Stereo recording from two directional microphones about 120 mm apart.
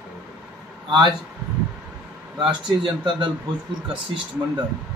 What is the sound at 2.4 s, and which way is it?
Speech, 40° right (ahead or behind).